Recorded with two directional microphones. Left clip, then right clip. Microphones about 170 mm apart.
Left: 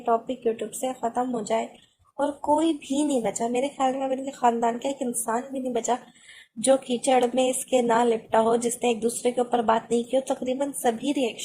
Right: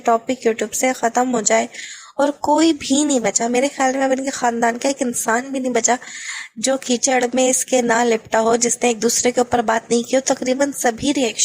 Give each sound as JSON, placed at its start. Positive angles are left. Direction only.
{"t": 0.0, "sound": "speech", "side_deg": -45}
{"t": 2.1, "sound": "speech", "side_deg": -65}
{"t": 3.5, "sound": "speech", "side_deg": -30}
{"t": 3.9, "sound": "speech", "side_deg": -45}
{"t": 4.9, "sound": "speech", "side_deg": -45}
{"t": 8.6, "sound": "speech", "side_deg": -35}
{"t": 9.0, "sound": "speech", "side_deg": -50}
{"t": 11.0, "sound": "a woman's voice", "side_deg": -30}